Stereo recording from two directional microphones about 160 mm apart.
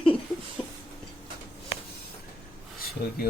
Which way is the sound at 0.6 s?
35° left (ahead or behind).